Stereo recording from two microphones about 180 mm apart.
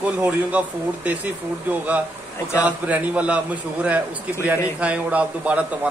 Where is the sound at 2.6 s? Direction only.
10° right (ahead or behind).